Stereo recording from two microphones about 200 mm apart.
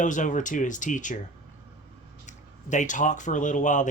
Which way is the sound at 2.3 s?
40° left (ahead or behind).